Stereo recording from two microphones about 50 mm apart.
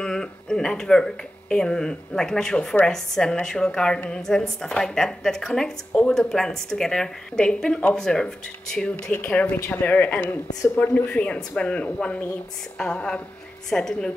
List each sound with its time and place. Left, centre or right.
0.0 s a woman's voice: centre
9.1 s speech: left
12.7 s a woman's voice: centre